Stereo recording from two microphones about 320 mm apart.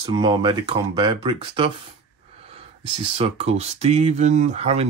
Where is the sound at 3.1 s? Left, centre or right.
Centre.